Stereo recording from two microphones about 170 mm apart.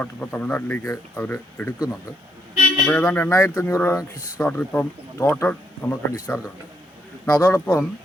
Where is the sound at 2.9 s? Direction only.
10° left (ahead or behind).